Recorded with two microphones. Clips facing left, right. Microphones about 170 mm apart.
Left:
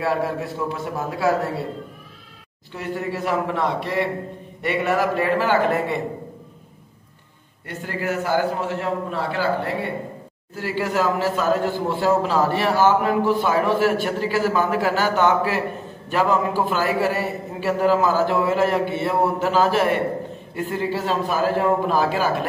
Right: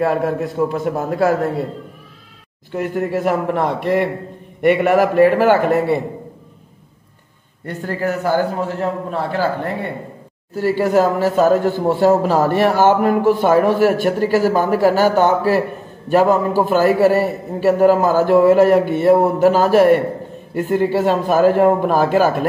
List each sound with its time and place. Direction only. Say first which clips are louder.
0.0 s a man's voice: right 5 dB; 45° right (ahead or behind)
2.7 s a man's voice: right 7 dB; 50° right (ahead or behind)
7.6 s a man's voice: right 5 dB; 40° right (ahead or behind)